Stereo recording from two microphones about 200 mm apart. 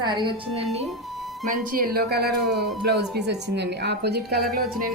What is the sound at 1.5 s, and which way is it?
Speech, 45° right (ahead or behind).